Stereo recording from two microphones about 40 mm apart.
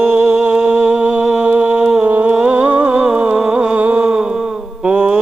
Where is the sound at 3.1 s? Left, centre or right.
Right.